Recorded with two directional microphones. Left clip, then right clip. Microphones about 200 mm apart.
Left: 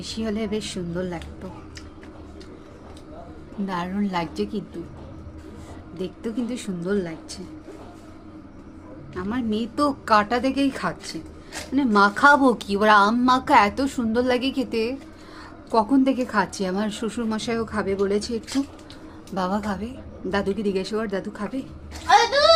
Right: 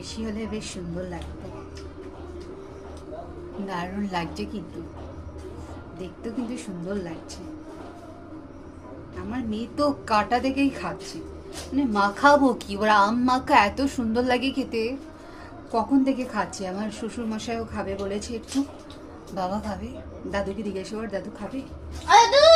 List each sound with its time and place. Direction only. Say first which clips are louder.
0.0 s speech: left 5 dB; 40° left (ahead or behind)
3.7 s speech: left 3 dB; 35° left (ahead or behind)
6.0 s speech: left 4 dB; 40° left (ahead or behind)
9.1 s speech: left 5 dB; 35° left (ahead or behind)